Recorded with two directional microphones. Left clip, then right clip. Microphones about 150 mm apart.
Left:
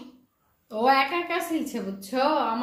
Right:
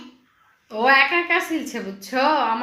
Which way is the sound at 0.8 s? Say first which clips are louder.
Right 5 dB; 15° right (ahead or behind).